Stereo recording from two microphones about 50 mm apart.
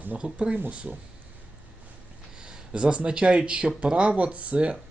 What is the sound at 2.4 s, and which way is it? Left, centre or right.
Speech, centre.